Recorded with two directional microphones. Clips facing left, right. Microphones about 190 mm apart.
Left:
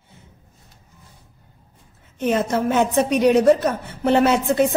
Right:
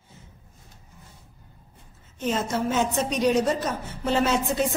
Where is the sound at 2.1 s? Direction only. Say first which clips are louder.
Left 6 dB; 60° left (ahead or behind).